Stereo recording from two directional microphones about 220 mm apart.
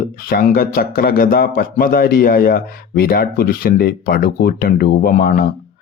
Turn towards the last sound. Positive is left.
turn(degrees=40)  # may be behind; listen again after turning